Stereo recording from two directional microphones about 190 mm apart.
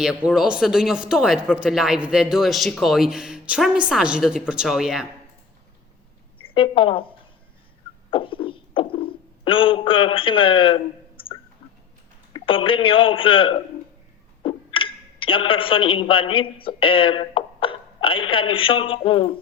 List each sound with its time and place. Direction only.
0.0 s speech: 5° right (ahead or behind)
6.5 s a woman's voice: 25° left (ahead or behind)
8.1 s a sound: 25° left (ahead or behind)
12.3 s a man's voice: 25° left (ahead or behind)